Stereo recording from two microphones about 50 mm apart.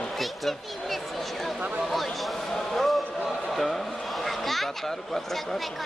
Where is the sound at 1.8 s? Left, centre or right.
Centre.